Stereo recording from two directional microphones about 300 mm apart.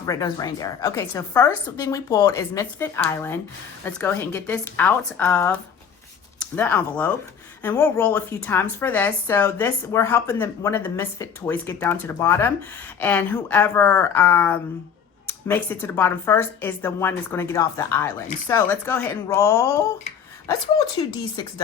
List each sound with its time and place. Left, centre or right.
0.0 s a woman's voice: centre
6.6 s a woman's voice: centre
21.0 s a woman's voice: centre